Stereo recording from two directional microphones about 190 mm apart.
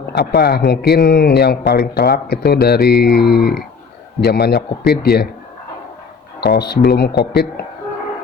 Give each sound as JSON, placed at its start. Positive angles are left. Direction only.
{"t": 0.1, "sound": "speech", "side_deg": 60}
{"t": 6.4, "sound": "speech", "side_deg": 60}